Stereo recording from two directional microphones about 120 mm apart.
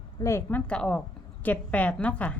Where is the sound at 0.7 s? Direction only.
5° left (ahead or behind).